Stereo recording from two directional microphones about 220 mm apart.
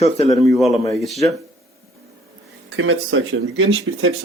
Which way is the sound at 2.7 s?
65° right (ahead or behind).